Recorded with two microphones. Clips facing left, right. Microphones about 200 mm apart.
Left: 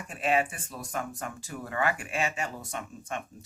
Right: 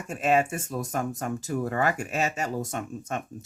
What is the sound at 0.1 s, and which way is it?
Speech, 45° right (ahead or behind).